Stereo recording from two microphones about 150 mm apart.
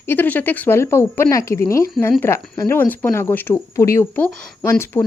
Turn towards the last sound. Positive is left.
turn(degrees=20)  # may be behind; listen again after turning